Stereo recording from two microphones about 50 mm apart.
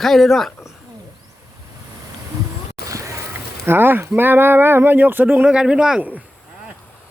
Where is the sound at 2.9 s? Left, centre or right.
Right.